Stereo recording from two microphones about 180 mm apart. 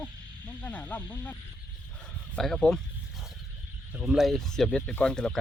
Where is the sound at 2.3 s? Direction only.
5° left (ahead or behind).